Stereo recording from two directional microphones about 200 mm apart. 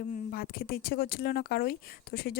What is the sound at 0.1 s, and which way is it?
Speech, 45° left (ahead or behind).